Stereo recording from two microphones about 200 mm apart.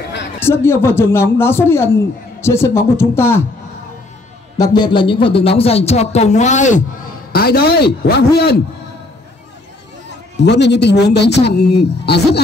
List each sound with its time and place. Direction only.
0.4 s speech: 10° left (ahead or behind)
4.6 s speech: 20° left (ahead or behind); by 6.8 s 35° left (ahead or behind)
7.3 s speech: 50° left (ahead or behind)
10.4 s speech: 60° left (ahead or behind)